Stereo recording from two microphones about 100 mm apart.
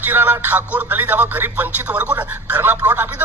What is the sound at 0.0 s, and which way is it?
Speech, 20° right (ahead or behind).